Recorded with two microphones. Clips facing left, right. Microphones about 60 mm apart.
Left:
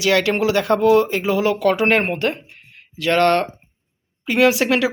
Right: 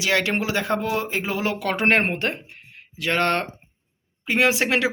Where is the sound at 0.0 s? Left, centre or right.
Right.